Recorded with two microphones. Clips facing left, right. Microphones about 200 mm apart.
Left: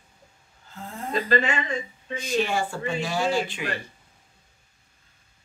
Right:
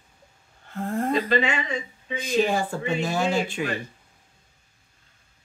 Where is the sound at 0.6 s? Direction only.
60° right (ahead or behind).